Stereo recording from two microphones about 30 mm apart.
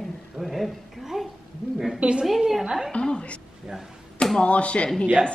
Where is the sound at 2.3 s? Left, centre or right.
Centre.